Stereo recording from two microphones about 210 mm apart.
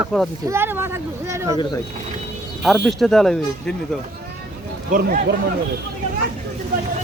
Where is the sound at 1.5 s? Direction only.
20° left (ahead or behind).